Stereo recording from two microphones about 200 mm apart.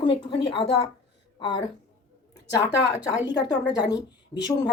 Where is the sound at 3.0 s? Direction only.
20° left (ahead or behind).